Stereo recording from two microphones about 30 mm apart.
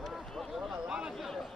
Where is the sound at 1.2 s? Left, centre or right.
Centre.